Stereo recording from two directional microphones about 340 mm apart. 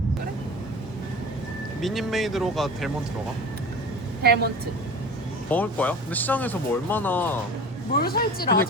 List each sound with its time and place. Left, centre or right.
1.8 s speech: centre
4.2 s a woman's voice: right
5.5 s speech: centre
7.9 s a woman's voice: left